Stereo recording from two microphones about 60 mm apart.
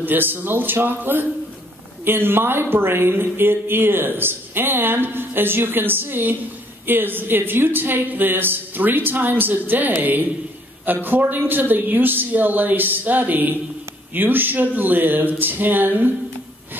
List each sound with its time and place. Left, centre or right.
0.0 s speech: right
11.1 s speech: right